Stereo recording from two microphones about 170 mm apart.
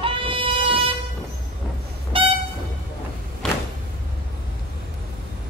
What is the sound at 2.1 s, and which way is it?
Train, 30° right (ahead or behind).